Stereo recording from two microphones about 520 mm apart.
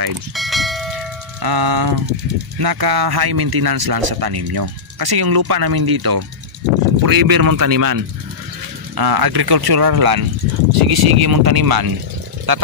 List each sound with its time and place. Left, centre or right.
0.4 s bell: centre
1.4 s speech: right